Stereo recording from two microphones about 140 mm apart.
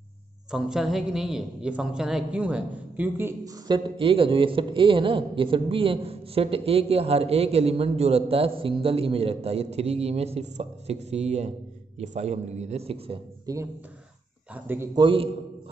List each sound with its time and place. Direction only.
0.5 s a woman's voice: 5° right (ahead or behind)
3.6 s a man's voice: 35° right (ahead or behind)
13.5 s speech: 25° right (ahead or behind)
14.5 s speech: 15° right (ahead or behind)
15.0 s a man's voice: 35° right (ahead or behind)